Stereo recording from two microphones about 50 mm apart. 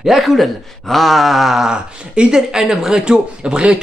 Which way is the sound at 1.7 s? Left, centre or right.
Centre.